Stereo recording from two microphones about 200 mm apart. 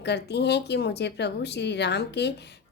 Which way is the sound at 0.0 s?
55° left (ahead or behind).